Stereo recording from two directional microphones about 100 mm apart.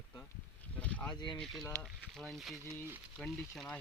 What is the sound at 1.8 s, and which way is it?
Speech, 5° left (ahead or behind).